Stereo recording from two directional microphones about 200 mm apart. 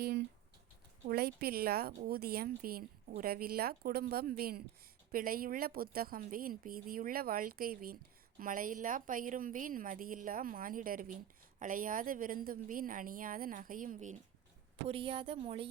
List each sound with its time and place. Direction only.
0.0 s a sound: 55° right (ahead or behind)
1.0 s a woman's voice: 50° right (ahead or behind)
14.8 s speech: 25° right (ahead or behind)